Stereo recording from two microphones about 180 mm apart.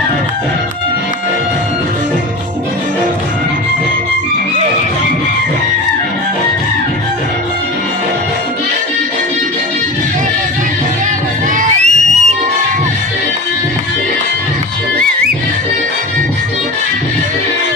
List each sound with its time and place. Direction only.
11.6 s music: 40° right (ahead or behind)